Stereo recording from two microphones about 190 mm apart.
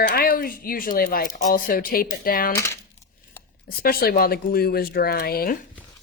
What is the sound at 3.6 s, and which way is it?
Speech, 50° left (ahead or behind).